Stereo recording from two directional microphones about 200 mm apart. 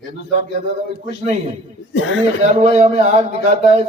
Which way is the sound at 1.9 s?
75° left (ahead or behind).